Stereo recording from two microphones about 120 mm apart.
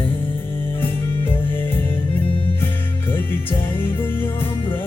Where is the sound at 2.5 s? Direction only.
15° left (ahead or behind).